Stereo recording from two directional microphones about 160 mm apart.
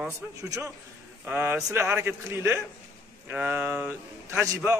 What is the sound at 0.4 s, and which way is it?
A man's voice, 20° right (ahead or behind).